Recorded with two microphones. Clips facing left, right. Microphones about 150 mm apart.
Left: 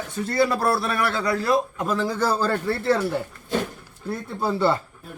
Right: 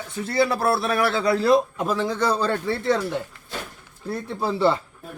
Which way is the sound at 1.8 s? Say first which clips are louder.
Even; centre (ahead or behind).